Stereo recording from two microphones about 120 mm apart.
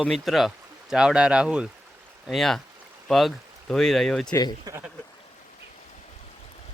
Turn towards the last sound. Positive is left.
turn(degrees=-30)  # may be behind; listen again after turning